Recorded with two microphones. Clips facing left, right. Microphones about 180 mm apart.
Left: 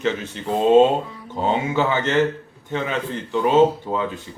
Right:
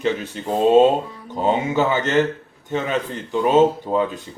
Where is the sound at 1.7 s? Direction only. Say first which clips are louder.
Right 1 dB; 20° right (ahead or behind).